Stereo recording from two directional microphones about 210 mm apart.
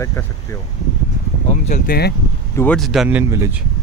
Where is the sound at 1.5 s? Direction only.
40° left (ahead or behind).